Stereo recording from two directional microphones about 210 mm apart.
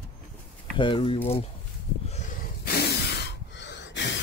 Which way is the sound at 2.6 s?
50° left (ahead or behind).